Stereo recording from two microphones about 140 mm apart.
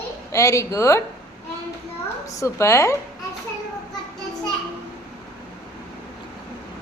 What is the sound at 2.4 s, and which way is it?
Speech, 20° left (ahead or behind).